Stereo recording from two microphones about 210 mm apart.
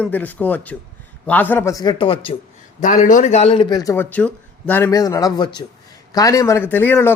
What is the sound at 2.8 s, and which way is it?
A man's voice, 35° left (ahead or behind).